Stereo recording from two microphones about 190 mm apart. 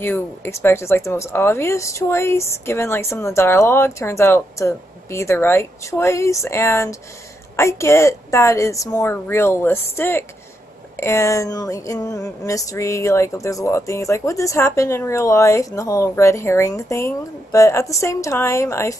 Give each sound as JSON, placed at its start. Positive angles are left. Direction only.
{"t": 0.0, "sound": "speech", "side_deg": 10}